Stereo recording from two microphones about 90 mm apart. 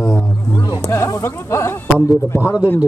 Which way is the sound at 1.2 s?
30° left (ahead or behind).